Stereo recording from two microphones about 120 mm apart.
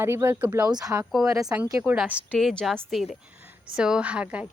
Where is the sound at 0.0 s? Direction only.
20° right (ahead or behind).